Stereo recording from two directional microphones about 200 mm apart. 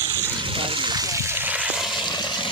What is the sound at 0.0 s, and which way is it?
Water, 10° right (ahead or behind).